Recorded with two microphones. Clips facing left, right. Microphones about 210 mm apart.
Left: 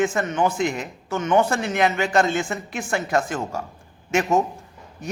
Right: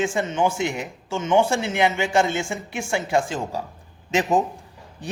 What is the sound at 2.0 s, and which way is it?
Speech, 10° right (ahead or behind).